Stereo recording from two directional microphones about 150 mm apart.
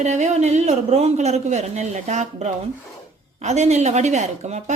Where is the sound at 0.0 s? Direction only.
50° right (ahead or behind).